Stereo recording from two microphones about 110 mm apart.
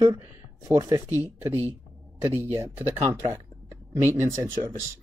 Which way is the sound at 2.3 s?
30° right (ahead or behind).